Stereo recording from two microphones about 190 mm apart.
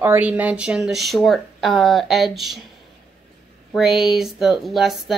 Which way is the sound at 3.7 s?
Centre (ahead or behind).